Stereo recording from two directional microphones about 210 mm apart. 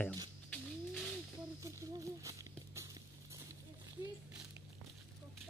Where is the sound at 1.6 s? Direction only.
15° right (ahead or behind).